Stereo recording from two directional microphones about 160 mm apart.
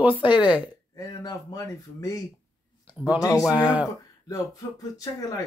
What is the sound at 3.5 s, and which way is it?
Speech, 5° right (ahead or behind).